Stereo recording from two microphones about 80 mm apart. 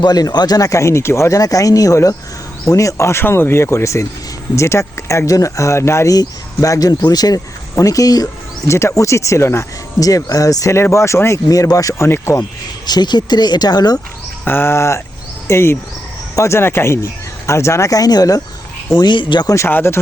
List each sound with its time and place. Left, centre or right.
0.0 s speech: left
6.1 s speech: left
8.6 s speech: left
12.0 s speech: left
12.4 s speech: left
14.4 s speech: left
18.9 s speech: left
19.6 s speech: left